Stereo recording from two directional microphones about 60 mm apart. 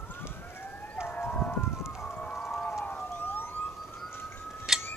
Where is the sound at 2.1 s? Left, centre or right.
Left.